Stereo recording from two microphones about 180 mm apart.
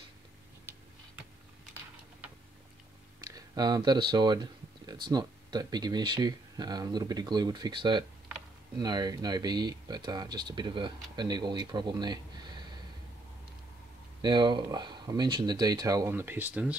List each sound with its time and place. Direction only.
3.3 s speech: 20° right (ahead or behind)
14.2 s speech: 25° right (ahead or behind); by 16.7 s 10° right (ahead or behind)